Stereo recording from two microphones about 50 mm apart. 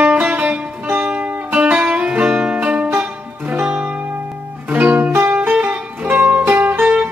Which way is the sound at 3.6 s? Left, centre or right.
Right.